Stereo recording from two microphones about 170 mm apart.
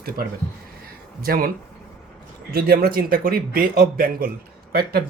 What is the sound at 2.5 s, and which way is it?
A man's voice, 60° right (ahead or behind).